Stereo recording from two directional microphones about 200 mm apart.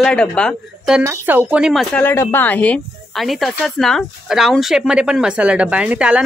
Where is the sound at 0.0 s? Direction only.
5° left (ahead or behind).